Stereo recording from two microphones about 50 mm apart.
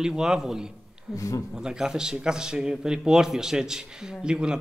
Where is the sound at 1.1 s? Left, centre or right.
Left.